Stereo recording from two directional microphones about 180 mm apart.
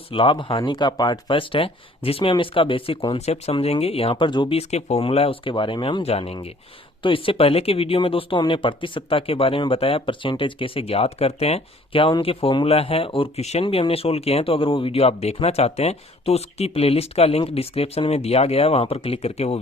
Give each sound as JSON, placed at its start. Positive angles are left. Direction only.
{"t": 0.1, "sound": "speech", "side_deg": 30}